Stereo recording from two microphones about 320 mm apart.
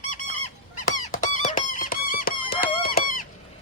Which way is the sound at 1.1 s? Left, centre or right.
Left.